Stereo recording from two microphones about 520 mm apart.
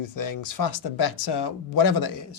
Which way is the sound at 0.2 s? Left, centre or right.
Left.